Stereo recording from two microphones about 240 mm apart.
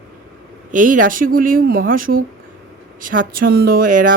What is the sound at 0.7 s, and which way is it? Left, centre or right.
Speech, right.